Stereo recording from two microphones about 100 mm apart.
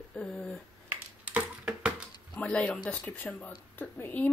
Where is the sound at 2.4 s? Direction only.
10° left (ahead or behind).